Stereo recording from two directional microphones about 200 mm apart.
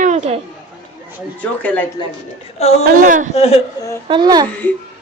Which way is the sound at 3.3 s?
30° left (ahead or behind).